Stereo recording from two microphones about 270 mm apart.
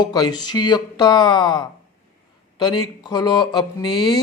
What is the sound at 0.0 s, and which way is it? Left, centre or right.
Speech, centre.